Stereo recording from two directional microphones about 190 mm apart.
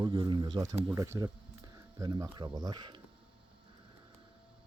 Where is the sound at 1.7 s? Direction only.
20° right (ahead or behind).